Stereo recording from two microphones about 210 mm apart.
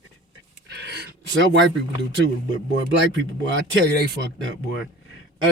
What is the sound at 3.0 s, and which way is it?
Speech, 60° right (ahead or behind).